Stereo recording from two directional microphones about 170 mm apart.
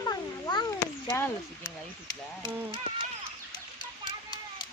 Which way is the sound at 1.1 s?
15° left (ahead or behind).